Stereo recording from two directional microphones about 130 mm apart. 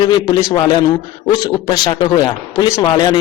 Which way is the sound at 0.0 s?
35° left (ahead or behind).